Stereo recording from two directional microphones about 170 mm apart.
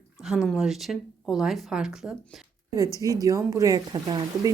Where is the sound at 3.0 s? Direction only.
20° right (ahead or behind).